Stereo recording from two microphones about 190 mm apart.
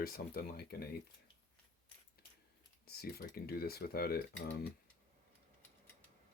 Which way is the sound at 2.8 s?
55° left (ahead or behind).